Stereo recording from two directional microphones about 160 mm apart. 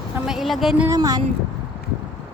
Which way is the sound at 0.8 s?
20° right (ahead or behind).